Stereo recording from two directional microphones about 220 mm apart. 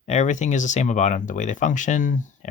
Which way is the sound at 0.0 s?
30° left (ahead or behind).